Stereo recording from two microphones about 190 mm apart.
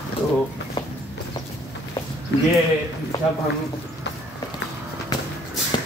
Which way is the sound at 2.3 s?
70° left (ahead or behind).